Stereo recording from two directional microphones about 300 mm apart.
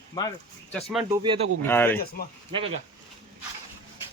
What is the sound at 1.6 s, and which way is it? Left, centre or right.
Speech, centre.